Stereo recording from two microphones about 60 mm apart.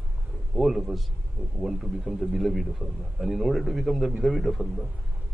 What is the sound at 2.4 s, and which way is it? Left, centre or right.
A man's voice, centre.